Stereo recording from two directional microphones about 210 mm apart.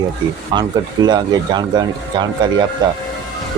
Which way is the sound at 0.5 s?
20° right (ahead or behind).